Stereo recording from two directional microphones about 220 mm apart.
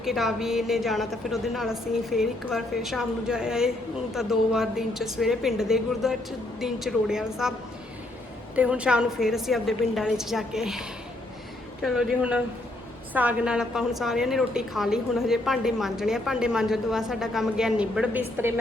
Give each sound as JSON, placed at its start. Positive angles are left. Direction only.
{"t": 0.0, "sound": "a woman's voice", "side_deg": 0}
{"t": 8.5, "sound": "a woman's voice", "side_deg": -5}